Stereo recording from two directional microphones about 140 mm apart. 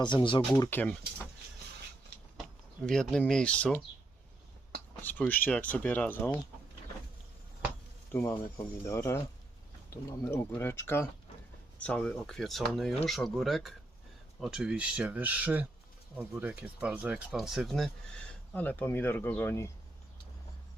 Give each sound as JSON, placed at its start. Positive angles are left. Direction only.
{"t": 0.0, "sound": "speech", "side_deg": 35}
{"t": 0.7, "sound": "speech", "side_deg": 10}
{"t": 2.8, "sound": "speech", "side_deg": 5}
{"t": 5.0, "sound": "speech", "side_deg": 10}
{"t": 8.1, "sound": "speech", "side_deg": 15}
{"t": 10.2, "sound": "speech", "side_deg": 15}
{"t": 11.8, "sound": "speech", "side_deg": 5}
{"t": 18.5, "sound": "speech", "side_deg": 10}